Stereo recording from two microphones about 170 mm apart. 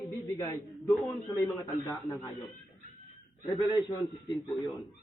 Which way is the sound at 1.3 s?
20° left (ahead or behind).